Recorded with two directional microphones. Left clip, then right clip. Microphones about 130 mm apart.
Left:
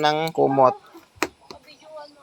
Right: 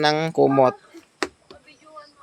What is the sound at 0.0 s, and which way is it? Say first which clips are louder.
Speech: right 1 dB; 85° right.